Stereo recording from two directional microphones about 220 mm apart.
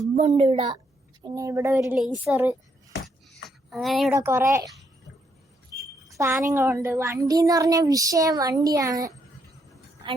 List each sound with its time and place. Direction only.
0.2 s a woman's voice: 25° right (ahead or behind)
1.8 s a woman's voice: centre (ahead or behind)
3.7 s a woman's voice: centre (ahead or behind)
4.1 s a woman's voice: 10° right (ahead or behind)
6.1 s a woman's voice: 15° right (ahead or behind)